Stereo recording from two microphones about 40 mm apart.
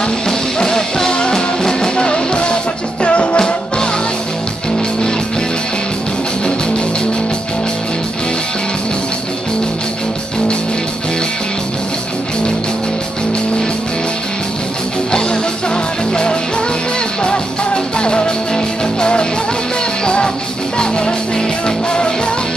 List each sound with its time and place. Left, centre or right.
0.0 s music: centre
15.0 s music: left
17.9 s music: left
20.7 s music: left